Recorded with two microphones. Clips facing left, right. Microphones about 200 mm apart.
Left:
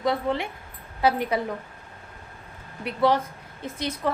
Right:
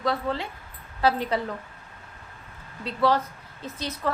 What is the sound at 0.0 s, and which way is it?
A woman's voice, 15° left (ahead or behind).